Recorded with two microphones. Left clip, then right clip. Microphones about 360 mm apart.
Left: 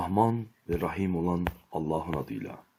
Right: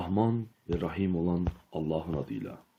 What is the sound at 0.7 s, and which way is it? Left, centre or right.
Speech, centre.